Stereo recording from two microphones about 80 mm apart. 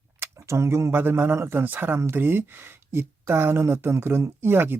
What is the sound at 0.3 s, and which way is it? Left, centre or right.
Speech, right.